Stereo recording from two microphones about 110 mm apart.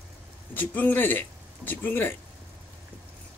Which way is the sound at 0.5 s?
15° left (ahead or behind).